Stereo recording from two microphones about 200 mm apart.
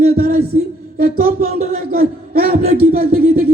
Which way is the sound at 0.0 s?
50° right (ahead or behind).